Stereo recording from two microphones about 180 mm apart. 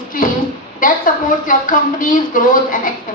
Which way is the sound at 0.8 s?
50° left (ahead or behind).